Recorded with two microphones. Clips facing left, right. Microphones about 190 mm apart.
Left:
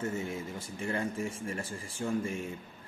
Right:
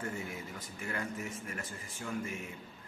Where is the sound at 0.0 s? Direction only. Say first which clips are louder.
Left 5 dB; 25° left (ahead or behind).